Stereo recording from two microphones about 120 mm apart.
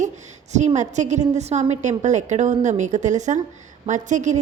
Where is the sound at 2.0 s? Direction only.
90° right.